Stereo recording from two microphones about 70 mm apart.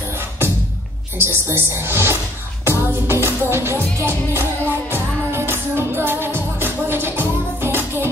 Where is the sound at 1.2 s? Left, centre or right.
Right.